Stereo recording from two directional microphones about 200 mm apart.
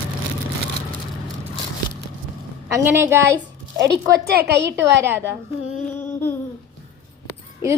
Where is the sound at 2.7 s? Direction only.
10° right (ahead or behind).